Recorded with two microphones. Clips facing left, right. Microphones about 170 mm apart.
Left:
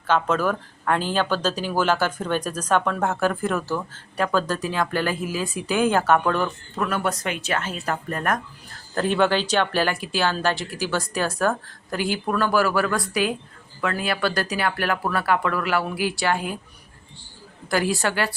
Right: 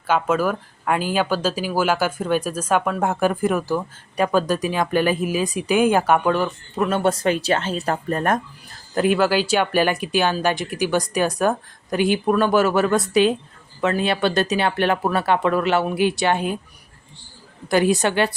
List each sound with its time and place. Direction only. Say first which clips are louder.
0.1 s speech: right 2 dB; 10° right (ahead or behind)
6.7 s speech: right 5 dB; 25° right (ahead or behind)
9.0 s speech: right 3 dB; 5° right (ahead or behind); by 16.6 s 20° right (ahead or behind)
17.7 s speech: right 5 dB; 20° right (ahead or behind)